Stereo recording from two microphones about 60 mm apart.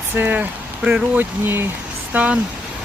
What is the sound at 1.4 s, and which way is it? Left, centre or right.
Speech, right.